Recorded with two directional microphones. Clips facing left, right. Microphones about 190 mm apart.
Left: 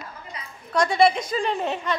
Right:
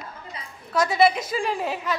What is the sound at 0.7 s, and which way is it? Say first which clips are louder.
A woman's voice: left 1 dB; 5° right (ahead or behind).